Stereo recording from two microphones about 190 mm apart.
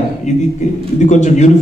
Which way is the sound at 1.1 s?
40° left (ahead or behind).